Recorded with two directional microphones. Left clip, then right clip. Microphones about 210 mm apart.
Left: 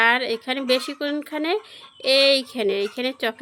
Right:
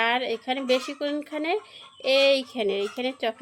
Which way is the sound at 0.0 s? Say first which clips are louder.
Left 5 dB; 25° left (ahead or behind).